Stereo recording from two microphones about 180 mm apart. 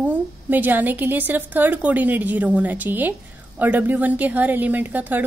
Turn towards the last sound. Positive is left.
turn(degrees=-10)  # may be behind; listen again after turning